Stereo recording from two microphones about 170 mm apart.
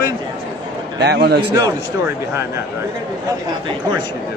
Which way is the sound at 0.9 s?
80° right.